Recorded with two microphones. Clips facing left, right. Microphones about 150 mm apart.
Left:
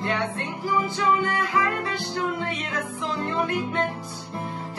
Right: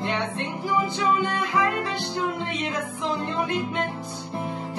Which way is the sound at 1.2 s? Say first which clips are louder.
Even; 20° right (ahead or behind).